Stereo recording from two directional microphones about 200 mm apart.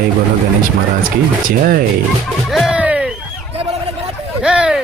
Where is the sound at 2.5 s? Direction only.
Centre (ahead or behind).